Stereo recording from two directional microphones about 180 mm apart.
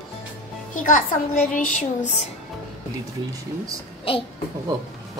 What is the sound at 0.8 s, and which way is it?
A child's voice, 50° left (ahead or behind).